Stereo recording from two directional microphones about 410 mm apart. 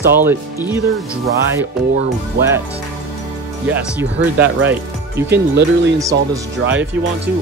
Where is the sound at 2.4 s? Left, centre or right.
Right.